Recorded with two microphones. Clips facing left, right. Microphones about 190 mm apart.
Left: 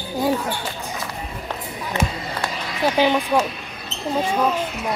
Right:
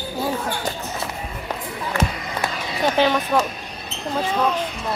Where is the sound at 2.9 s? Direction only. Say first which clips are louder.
Left 1 dB; 15° left (ahead or behind).